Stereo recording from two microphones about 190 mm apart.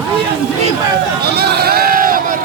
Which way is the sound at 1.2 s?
55° right (ahead or behind).